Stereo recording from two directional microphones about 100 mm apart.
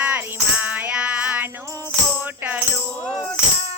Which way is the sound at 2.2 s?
20° right (ahead or behind).